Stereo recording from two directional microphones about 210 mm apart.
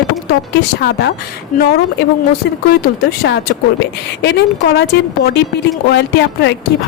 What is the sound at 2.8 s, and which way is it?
A woman's voice, 50° left (ahead or behind).